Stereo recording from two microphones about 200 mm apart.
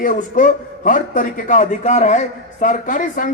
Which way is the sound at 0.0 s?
40° left (ahead or behind).